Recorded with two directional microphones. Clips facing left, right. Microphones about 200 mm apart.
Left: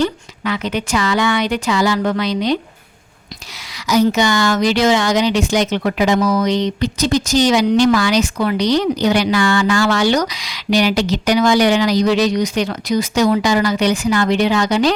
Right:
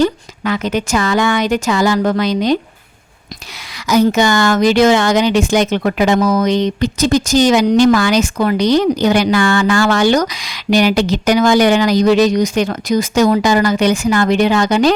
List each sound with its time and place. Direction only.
0.0 s speech: 45° right (ahead or behind)
3.8 s speech: 50° right (ahead or behind)